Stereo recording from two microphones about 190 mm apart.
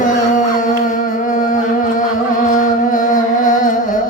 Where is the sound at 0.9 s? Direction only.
45° left (ahead or behind).